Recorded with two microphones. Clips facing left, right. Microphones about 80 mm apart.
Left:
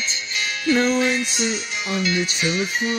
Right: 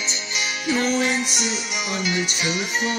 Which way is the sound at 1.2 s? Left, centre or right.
Right.